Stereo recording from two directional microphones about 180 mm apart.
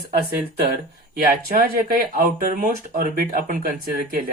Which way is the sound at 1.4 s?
55° right (ahead or behind).